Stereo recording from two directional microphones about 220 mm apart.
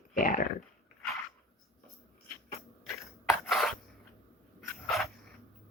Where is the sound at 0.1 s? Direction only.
40° left (ahead or behind).